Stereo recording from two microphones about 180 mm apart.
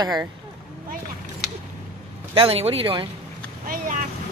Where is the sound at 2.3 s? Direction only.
30° right (ahead or behind).